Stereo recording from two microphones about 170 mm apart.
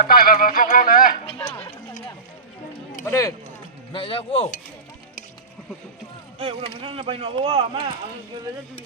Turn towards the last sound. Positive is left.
turn(degrees=-30)  # may be behind; listen again after turning